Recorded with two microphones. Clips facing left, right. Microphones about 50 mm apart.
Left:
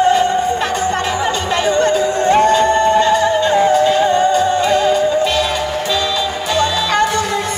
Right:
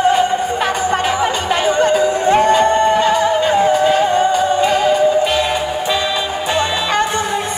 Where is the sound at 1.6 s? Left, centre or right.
Centre.